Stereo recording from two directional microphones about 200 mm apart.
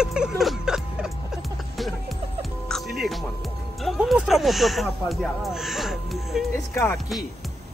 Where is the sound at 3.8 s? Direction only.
Centre (ahead or behind).